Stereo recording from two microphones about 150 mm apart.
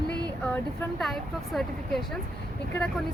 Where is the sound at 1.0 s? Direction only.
Centre (ahead or behind).